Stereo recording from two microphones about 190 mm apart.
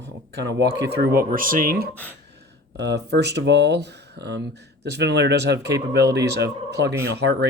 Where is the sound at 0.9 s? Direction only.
45° right (ahead or behind).